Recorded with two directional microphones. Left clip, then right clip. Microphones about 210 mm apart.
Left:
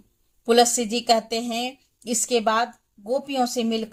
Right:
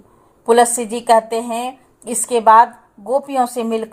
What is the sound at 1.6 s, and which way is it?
Speech, 25° right (ahead or behind).